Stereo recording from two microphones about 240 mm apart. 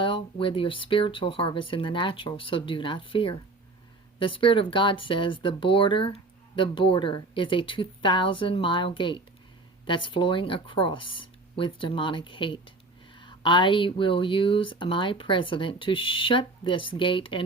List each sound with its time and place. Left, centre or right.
0.0 s speech: left